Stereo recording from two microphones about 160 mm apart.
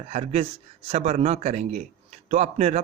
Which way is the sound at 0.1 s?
40° right (ahead or behind).